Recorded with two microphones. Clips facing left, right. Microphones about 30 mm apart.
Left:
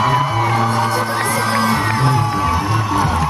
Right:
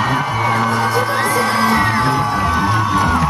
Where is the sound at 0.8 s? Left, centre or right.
Centre.